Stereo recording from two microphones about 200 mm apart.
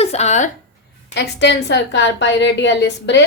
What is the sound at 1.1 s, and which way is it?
A woman's voice, 60° left (ahead or behind).